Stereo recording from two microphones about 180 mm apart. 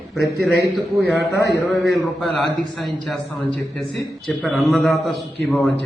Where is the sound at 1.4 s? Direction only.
65° left (ahead or behind).